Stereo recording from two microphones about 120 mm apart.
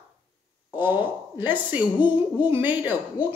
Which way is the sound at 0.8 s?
15° right (ahead or behind).